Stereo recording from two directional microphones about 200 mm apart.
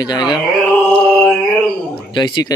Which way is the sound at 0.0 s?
20° left (ahead or behind).